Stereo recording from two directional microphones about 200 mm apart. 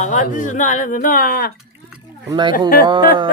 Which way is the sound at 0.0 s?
40° left (ahead or behind).